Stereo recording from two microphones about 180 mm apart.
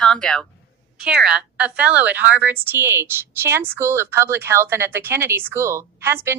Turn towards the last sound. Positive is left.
turn(degrees=-15)  # may be behind; listen again after turning